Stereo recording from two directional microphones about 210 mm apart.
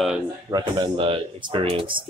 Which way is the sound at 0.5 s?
20° right (ahead or behind).